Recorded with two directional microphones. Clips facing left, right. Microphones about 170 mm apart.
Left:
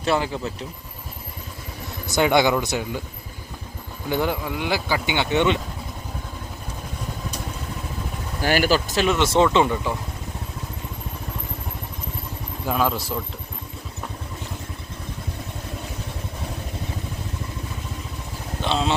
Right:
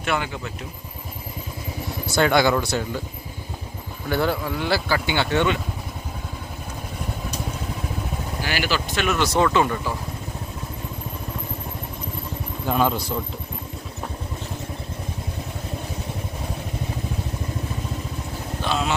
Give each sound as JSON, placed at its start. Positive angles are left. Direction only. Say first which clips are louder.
{"t": 0.0, "sound": "speech", "louder": "left 3 dB", "side_deg": 30}
{"t": 2.0, "sound": "speech", "louder": "even", "side_deg": 15}
{"t": 4.1, "sound": "speech", "louder": "right 1 dB", "side_deg": 15}
{"t": 8.4, "sound": "speech", "louder": "left 6 dB", "side_deg": 45}
{"t": 9.0, "sound": "speech", "louder": "left 2 dB", "side_deg": 25}
{"t": 12.6, "sound": "speech", "louder": "right 1 dB", "side_deg": 0}
{"t": 18.6, "sound": "vehicle", "louder": "left 2 dB", "side_deg": 25}